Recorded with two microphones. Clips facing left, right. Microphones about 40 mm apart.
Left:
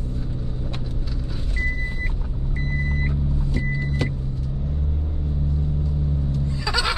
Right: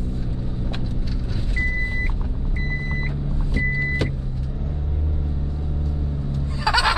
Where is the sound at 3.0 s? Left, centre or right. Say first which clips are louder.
Left 2 dB; centre.